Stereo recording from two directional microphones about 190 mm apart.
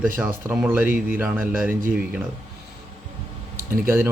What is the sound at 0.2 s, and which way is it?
Speech, 10° right (ahead or behind).